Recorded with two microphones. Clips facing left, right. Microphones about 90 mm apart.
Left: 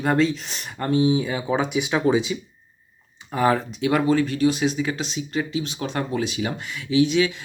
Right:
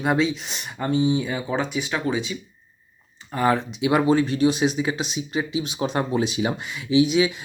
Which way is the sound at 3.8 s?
20° right (ahead or behind).